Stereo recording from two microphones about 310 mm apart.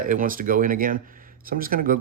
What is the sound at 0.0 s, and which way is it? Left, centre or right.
Speech, right.